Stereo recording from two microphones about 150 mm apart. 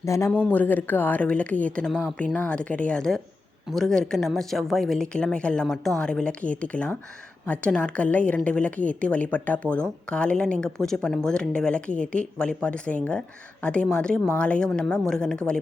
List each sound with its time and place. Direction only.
0.0 s a woman's voice: 20° left (ahead or behind)